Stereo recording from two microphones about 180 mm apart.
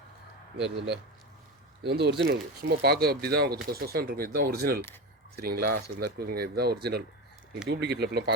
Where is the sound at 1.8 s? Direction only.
65° right (ahead or behind).